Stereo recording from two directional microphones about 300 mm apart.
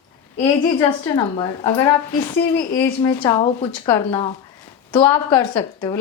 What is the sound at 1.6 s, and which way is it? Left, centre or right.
Speech, centre.